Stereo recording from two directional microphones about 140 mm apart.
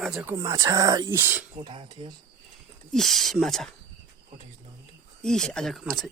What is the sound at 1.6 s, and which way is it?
Speech, 35° right (ahead or behind).